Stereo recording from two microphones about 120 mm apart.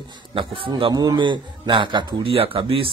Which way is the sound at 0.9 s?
30° right (ahead or behind).